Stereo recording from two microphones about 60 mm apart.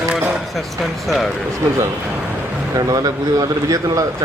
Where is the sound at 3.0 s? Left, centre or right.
Right.